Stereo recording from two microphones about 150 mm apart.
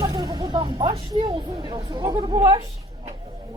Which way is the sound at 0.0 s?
25° right (ahead or behind).